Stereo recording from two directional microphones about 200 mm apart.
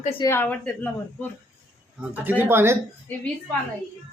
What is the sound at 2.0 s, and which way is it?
Speech, 10° right (ahead or behind).